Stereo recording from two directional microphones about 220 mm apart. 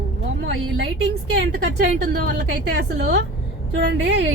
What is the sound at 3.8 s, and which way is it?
Speech, 55° right (ahead or behind).